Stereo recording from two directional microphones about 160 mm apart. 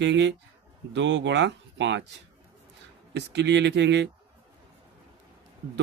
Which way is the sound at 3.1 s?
90° right.